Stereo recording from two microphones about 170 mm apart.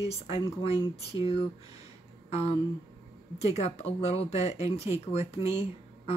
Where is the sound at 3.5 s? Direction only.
40° left (ahead or behind).